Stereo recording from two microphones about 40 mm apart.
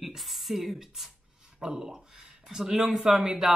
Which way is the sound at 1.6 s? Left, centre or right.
Right.